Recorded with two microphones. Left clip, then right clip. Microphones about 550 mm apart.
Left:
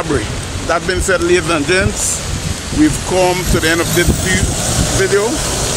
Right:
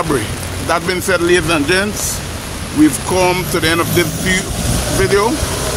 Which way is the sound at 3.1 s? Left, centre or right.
Right.